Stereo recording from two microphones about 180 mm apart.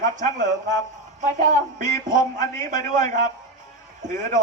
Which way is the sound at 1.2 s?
45° right (ahead or behind).